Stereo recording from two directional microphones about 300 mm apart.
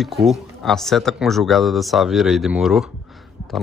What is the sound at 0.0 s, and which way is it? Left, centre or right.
Speech, centre.